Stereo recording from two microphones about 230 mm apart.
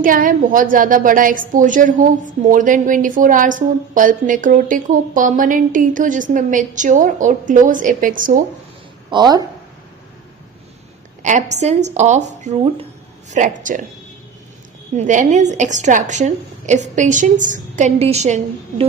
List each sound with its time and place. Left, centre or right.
0.0 s a woman's voice: right
9.0 s speech: centre
11.2 s a woman's voice: right
14.9 s a woman's voice: right